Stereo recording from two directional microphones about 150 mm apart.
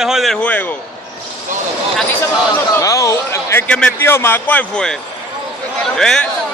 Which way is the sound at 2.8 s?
20° left (ahead or behind).